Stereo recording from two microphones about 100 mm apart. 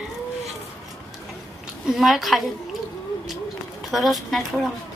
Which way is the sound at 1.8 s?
5° right (ahead or behind).